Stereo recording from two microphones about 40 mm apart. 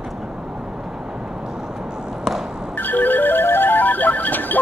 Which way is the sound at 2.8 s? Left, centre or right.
Left.